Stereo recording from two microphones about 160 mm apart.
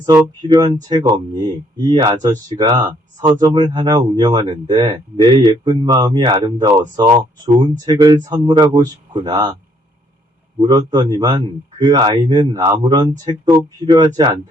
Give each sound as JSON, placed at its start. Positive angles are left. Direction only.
{"t": 0.0, "sound": "speech", "side_deg": -25}
{"t": 10.6, "sound": "speech", "side_deg": -25}